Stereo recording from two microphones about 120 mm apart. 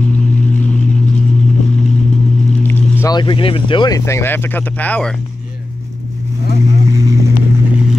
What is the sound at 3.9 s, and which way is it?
Speech, 25° left (ahead or behind).